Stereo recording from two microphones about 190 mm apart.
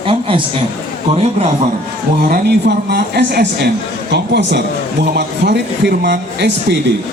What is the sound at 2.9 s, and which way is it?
Speech, 55° right (ahead or behind).